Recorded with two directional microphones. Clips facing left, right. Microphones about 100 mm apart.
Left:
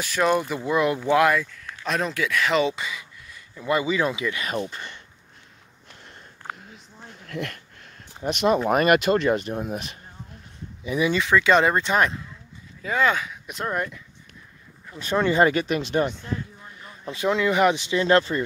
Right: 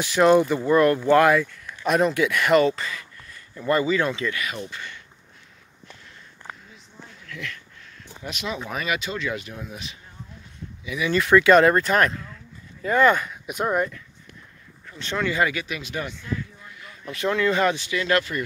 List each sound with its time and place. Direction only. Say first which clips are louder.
0.0 s speech: right 5 dB; centre (ahead or behind)
0.7 s speech: right 3 dB; 10° left (ahead or behind)
1.2 s speech: right 2 dB; centre (ahead or behind)
2.6 s speech: right 3 dB; 10° left (ahead or behind)
4.4 s speech: left 3 dB; 40° left (ahead or behind)
7.2 s a sound: left 5 dB; 50° left (ahead or behind)
8.3 s speech: left 11 dB; 55° left (ahead or behind)
11.1 s speech: right 5 dB; 5° right (ahead or behind)
14.9 s speech: left 3 dB; 15° left (ahead or behind)
15.1 s speech: left 5 dB; 25° left (ahead or behind)
16.1 s a sound: even; 40° left (ahead or behind)
17.2 s speech: left 1 dB; 20° left (ahead or behind)
17.9 s speech: left 4 dB; 30° left (ahead or behind)